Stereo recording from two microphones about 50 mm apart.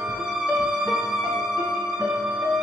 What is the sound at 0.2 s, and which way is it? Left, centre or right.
Music, centre.